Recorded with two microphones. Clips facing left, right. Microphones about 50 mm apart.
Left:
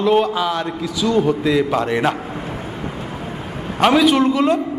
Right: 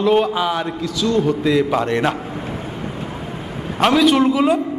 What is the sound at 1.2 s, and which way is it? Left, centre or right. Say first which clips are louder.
Speech: even; centre.